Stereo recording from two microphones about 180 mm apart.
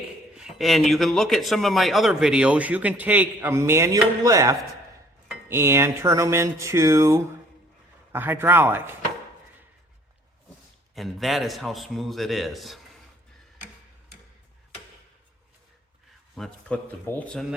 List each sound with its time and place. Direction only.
0.3 s speech: centre (ahead or behind)
10.9 s speech: centre (ahead or behind)
16.3 s speech: 5° left (ahead or behind)